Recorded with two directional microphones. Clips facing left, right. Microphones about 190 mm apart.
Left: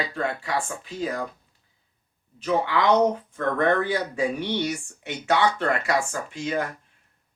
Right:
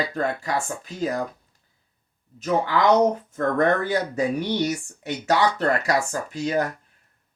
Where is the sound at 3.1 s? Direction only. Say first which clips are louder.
Right 3 dB; 40° right (ahead or behind).